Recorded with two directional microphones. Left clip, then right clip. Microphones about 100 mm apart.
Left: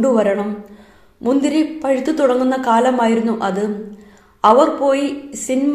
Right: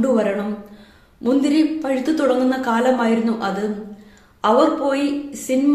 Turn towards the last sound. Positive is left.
turn(degrees=35)  # may be behind; listen again after turning